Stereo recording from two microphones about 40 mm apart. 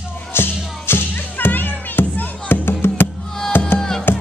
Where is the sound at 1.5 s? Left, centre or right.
Left.